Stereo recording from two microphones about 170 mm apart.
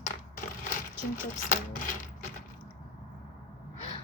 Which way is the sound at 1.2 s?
55° left (ahead or behind).